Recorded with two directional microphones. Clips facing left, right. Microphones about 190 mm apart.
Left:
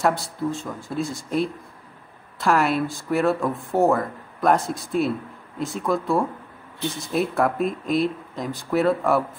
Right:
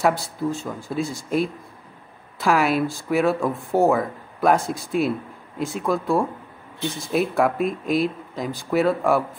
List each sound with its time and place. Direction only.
0.0 s speech: centre (ahead or behind)